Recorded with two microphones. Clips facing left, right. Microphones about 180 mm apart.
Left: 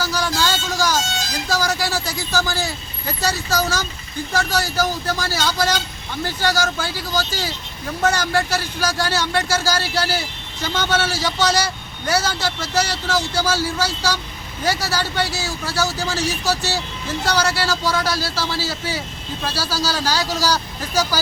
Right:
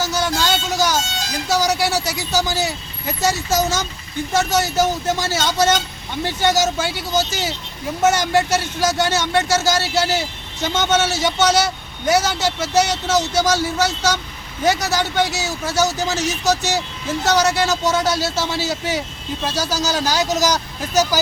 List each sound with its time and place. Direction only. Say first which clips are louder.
0.0 s vehicle: right 1 dB; 20° right (ahead or behind)
1.5 s speech: right 4 dB; 20° right (ahead or behind)